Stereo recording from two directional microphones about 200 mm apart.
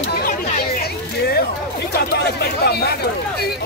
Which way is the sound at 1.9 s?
55° left (ahead or behind).